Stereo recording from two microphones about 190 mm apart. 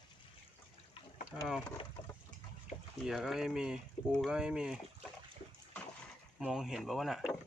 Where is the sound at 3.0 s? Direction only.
Centre (ahead or behind).